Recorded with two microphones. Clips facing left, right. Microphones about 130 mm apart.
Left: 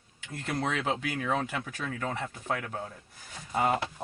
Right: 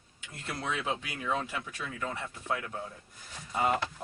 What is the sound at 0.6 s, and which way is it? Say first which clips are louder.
Speech: left 3 dB; 70° left (ahead or behind).